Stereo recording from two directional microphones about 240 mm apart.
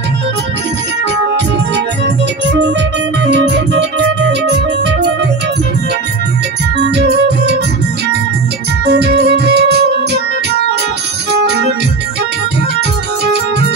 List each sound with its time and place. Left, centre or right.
3.3 s music: right
6.8 s music: right
8.8 s music: right